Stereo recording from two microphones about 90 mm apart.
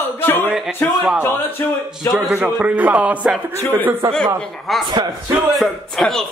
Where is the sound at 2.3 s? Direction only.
20° right (ahead or behind).